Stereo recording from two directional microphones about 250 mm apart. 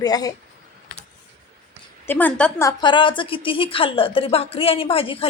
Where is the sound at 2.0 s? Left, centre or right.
Centre.